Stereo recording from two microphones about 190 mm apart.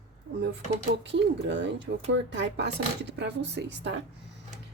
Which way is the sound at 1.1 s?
70° right (ahead or behind).